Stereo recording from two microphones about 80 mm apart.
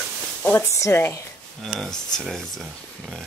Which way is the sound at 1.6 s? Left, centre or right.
Centre.